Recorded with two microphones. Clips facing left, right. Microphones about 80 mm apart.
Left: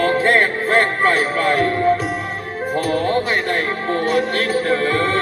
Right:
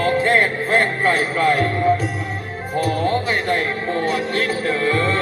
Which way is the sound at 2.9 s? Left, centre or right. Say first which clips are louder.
Left 2 dB; left.